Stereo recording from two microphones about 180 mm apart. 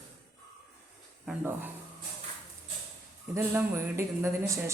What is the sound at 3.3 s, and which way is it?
Speech, 15° right (ahead or behind).